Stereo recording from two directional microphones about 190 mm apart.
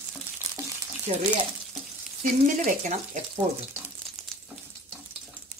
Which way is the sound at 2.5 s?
40° right (ahead or behind).